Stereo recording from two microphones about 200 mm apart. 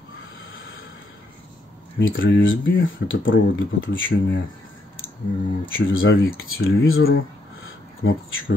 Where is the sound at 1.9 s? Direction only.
75° left (ahead or behind).